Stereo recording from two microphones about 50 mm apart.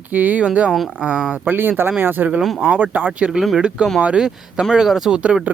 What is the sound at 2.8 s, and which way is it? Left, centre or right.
Speech, right.